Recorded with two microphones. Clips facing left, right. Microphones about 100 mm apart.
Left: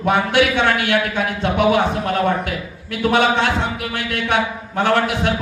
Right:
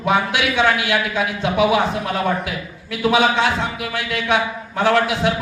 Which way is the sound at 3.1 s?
55° left (ahead or behind).